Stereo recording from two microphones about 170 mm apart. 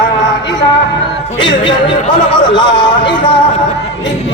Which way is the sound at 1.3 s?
30° left (ahead or behind).